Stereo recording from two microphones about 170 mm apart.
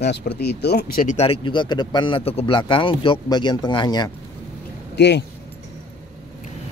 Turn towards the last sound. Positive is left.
turn(degrees=90)